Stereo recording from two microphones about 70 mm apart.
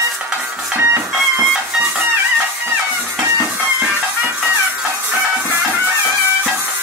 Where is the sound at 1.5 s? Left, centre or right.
Centre.